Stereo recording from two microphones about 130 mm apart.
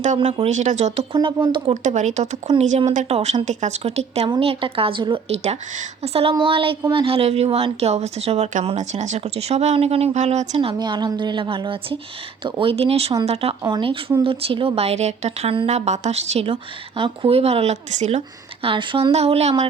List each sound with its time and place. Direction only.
0.3 s speech: 60° right (ahead or behind)
2.5 s a woman's voice: 55° right (ahead or behind)
3.4 s speech: 65° right (ahead or behind)
4.3 s a woman's voice: 45° right (ahead or behind)
5.3 s a woman's voice: 55° right (ahead or behind)
10.6 s a woman's voice: 40° right (ahead or behind); by 18.2 s 55° right (ahead or behind)
18.6 s a woman's voice: 40° right (ahead or behind)
19.1 s speech: 55° right (ahead or behind)